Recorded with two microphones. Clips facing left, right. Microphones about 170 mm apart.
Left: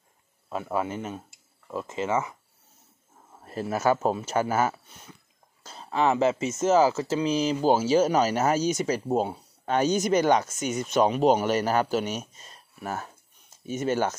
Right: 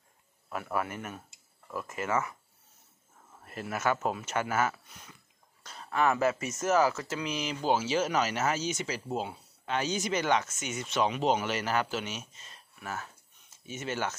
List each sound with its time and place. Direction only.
0.5 s speech: 25° left (ahead or behind)
3.4 s speech: 30° left (ahead or behind)